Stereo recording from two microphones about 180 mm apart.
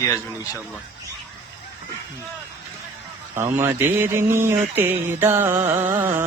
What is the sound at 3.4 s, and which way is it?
A man's voice, 15° right (ahead or behind).